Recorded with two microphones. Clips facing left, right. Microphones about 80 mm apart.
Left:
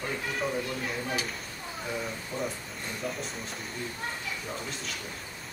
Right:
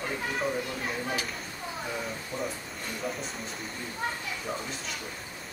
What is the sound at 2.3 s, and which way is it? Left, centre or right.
Speech, right.